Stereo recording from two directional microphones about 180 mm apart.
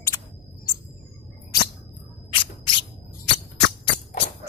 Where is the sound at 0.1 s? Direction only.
25° left (ahead or behind).